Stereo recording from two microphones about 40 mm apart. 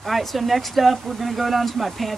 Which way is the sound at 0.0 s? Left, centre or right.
Centre.